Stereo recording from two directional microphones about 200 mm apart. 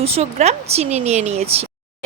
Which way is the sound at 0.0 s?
30° right (ahead or behind).